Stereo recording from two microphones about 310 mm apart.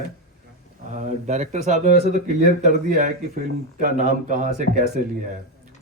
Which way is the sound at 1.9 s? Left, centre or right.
Left.